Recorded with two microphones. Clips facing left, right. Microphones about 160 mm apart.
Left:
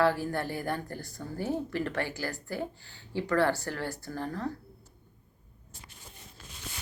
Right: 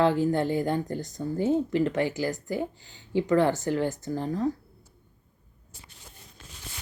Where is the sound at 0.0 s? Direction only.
20° right (ahead or behind).